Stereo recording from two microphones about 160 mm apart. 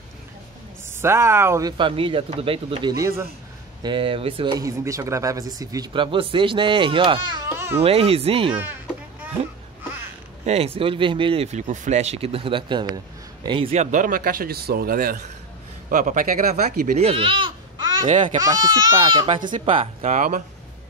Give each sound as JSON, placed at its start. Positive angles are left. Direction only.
{"t": 1.0, "sound": "speech", "side_deg": -15}
{"t": 3.8, "sound": "speech", "side_deg": -30}
{"t": 4.6, "sound": "speech", "side_deg": -20}
{"t": 7.5, "sound": "baby cry", "side_deg": -15}
{"t": 7.8, "sound": "speech", "side_deg": -35}
{"t": 10.4, "sound": "speech", "side_deg": -40}
{"t": 13.9, "sound": "a man's voice", "side_deg": -60}
{"t": 17.0, "sound": "speech", "side_deg": -35}